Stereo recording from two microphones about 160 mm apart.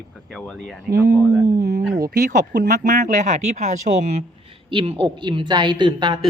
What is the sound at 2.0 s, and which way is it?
Speech, 85° right.